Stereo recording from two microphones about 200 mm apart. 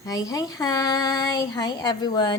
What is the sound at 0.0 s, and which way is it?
A woman's voice, 15° left (ahead or behind).